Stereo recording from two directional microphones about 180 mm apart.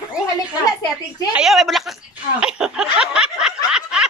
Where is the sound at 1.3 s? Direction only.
Centre (ahead or behind).